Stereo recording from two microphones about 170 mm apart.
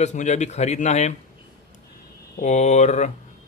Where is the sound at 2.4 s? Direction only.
40° left (ahead or behind).